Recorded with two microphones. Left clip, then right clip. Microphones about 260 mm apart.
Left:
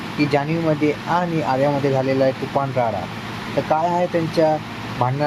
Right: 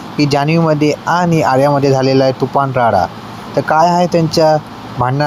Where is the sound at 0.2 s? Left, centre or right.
Right.